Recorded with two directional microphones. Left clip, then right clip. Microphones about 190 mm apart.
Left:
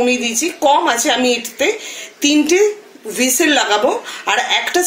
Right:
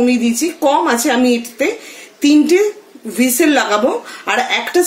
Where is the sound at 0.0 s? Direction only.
55° right (ahead or behind).